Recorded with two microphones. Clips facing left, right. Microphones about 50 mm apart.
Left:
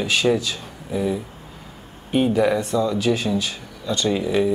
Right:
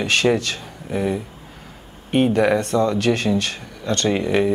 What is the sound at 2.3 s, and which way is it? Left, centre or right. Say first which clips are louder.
Speech: right 1 dB; right.